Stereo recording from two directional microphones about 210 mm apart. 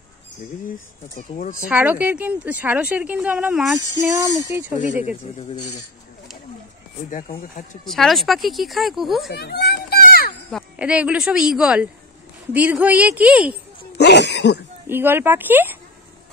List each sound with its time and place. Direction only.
1.3 s speech: 40° left (ahead or behind)
1.7 s a woman's voice: 5° right (ahead or behind)
4.1 s a woman's voice: 15° right (ahead or behind)
5.0 s speech: 30° left (ahead or behind)
7.1 s speech: 35° left (ahead or behind)
7.8 s speech: centre (ahead or behind)
9.3 s children playing: 50° left (ahead or behind)
10.5 s a woman's voice: 5° right (ahead or behind)
13.9 s speech: 55° left (ahead or behind)
14.9 s a woman's voice: 10° right (ahead or behind)